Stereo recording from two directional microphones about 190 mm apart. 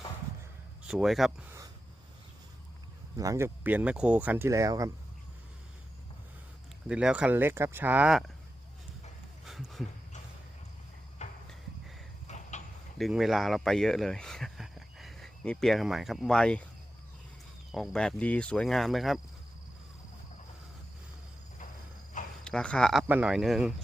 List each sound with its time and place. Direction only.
0.9 s speech: centre (ahead or behind)
3.2 s speech: 15° right (ahead or behind)
6.8 s speech: 5° right (ahead or behind)
9.5 s a sound: centre (ahead or behind)
11.2 s a sound: 35° left (ahead or behind)
13.0 s speech: centre (ahead or behind)
17.7 s speech: centre (ahead or behind)
22.4 s speech: 5° left (ahead or behind)